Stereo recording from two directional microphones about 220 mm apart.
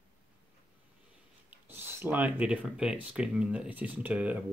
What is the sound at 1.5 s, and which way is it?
Speech, 10° right (ahead or behind).